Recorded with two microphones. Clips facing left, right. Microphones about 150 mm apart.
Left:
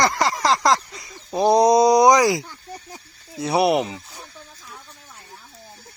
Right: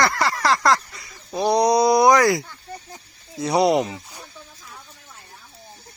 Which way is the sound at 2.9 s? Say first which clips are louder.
Even; 10° left (ahead or behind).